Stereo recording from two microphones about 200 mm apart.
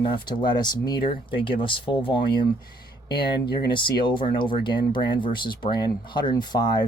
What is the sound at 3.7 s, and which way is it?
Speech, 25° left (ahead or behind).